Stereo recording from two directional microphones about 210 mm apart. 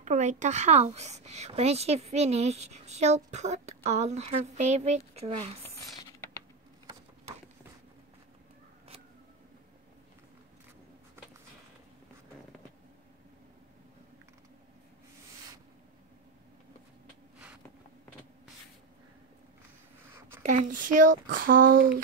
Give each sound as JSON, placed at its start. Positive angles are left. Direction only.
{"t": 0.0, "sound": "a woman's voice", "side_deg": -35}
{"t": 20.4, "sound": "a woman's voice", "side_deg": -35}